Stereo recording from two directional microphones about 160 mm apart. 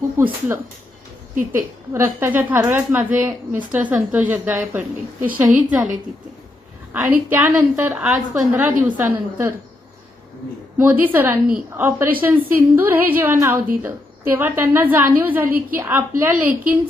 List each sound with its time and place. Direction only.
0.2 s a woman's voice: 15° right (ahead or behind)
11.0 s a woman's voice: 10° right (ahead or behind)